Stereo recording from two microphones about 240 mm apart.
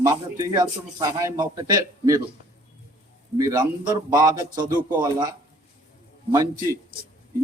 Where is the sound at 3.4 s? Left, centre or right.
Centre.